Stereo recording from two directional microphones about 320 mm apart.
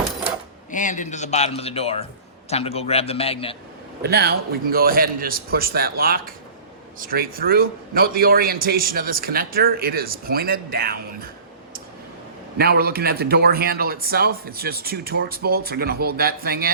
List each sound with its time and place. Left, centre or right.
0.7 s a man's voice: left
4.0 s a man's voice: right
12.5 s a man's voice: right